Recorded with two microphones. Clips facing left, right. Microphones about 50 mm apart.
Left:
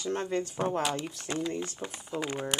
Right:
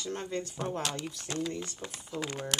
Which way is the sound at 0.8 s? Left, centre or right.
Centre.